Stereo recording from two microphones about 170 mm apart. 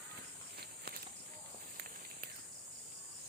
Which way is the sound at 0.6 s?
65° right (ahead or behind).